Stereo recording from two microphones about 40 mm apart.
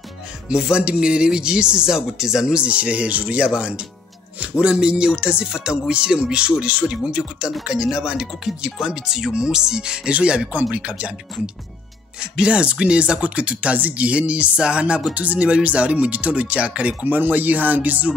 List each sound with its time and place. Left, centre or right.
0.5 s speech: right
17.0 s speech: right